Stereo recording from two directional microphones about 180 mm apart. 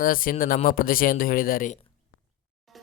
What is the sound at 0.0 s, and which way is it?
Speech, 50° left (ahead or behind).